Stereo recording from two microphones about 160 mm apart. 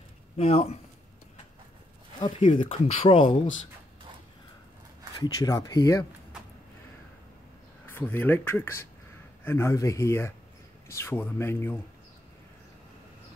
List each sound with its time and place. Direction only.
0.4 s speech: 40° left (ahead or behind)
2.1 s speech: 35° left (ahead or behind)
5.2 s speech: 20° left (ahead or behind)
7.8 s speech: 15° left (ahead or behind)